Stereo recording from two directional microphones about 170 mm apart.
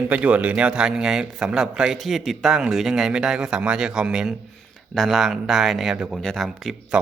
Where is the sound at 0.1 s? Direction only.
10° right (ahead or behind).